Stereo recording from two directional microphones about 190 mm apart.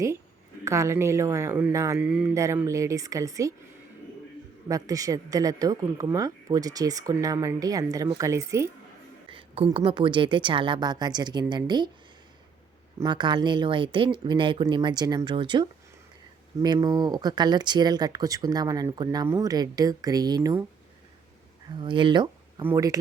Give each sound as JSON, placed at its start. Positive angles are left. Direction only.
{"t": 0.6, "sound": "speech", "side_deg": -15}
{"t": 2.0, "sound": "speech", "side_deg": -5}
{"t": 4.7, "sound": "speech", "side_deg": -20}
{"t": 9.3, "sound": "speech", "side_deg": -30}
{"t": 13.0, "sound": "speech", "side_deg": -25}
{"t": 21.8, "sound": "speech", "side_deg": -25}